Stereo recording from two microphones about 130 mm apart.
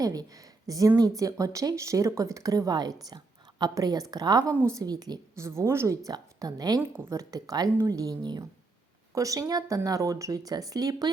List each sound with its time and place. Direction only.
0.0 s a woman's voice: 30° right (ahead or behind)
5.4 s a woman's voice: 20° right (ahead or behind)